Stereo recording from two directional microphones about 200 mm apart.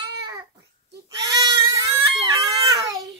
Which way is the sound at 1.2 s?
15° right (ahead or behind).